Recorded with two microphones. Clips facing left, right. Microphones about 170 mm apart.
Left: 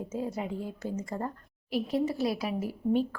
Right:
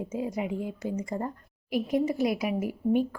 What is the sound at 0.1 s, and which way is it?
A woman's voice, 15° right (ahead or behind).